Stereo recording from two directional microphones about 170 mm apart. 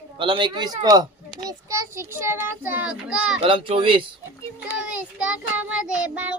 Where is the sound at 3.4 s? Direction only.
30° right (ahead or behind).